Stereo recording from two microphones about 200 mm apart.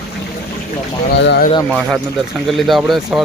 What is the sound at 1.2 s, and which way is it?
Speech, 60° left (ahead or behind).